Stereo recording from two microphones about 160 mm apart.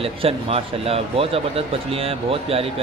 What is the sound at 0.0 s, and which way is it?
Speech, 35° right (ahead or behind).